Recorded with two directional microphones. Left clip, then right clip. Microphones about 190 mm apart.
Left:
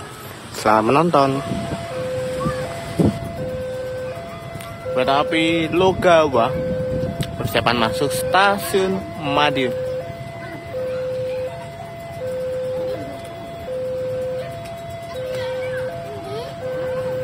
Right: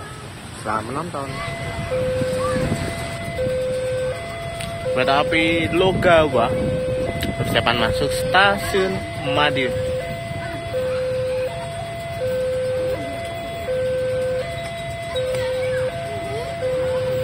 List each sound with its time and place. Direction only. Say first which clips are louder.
0.7 s speech: left 10 dB; 45° left (ahead or behind)
4.9 s speech: even; 15° left (ahead or behind)